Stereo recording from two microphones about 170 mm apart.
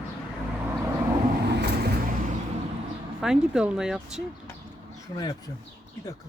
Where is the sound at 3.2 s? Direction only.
5° right (ahead or behind).